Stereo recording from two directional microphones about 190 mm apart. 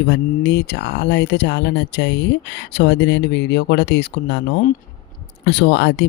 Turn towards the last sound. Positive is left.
turn(degrees=65)  # may be behind; listen again after turning